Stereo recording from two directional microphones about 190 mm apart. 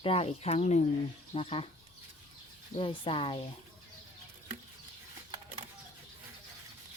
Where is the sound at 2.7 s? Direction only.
30° left (ahead or behind).